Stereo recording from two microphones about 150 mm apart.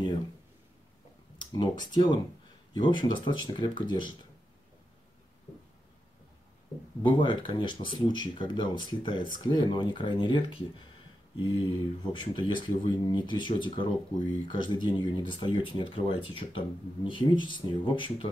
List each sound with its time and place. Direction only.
1.4 s a sound: 30° left (ahead or behind)
1.9 s speech: 30° left (ahead or behind)
7.0 s speech: 30° left (ahead or behind)